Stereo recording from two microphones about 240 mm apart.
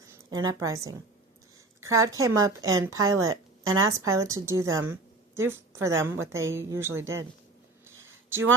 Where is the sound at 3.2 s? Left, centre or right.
Centre.